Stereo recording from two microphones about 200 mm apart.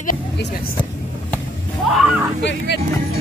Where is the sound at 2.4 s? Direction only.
60° left (ahead or behind).